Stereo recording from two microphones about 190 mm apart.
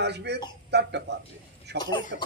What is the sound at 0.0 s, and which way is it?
A man's voice, 65° right (ahead or behind).